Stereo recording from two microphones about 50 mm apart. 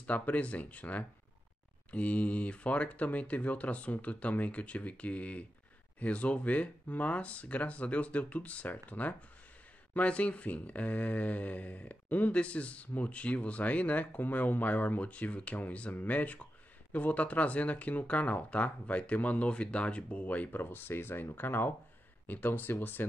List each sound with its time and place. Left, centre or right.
0.0 s speech: left